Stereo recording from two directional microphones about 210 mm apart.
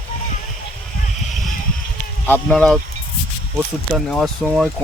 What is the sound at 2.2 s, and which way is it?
Speech, 5° left (ahead or behind).